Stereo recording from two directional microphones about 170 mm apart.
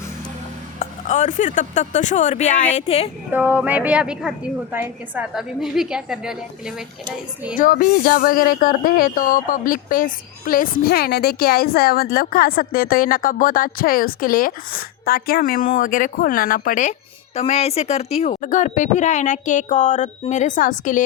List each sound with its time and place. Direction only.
0.8 s speech: 45° left (ahead or behind)
3.3 s a woman's voice: 10° right (ahead or behind)
7.5 s speech: 55° left (ahead or behind)
17.3 s speech: 40° left (ahead or behind)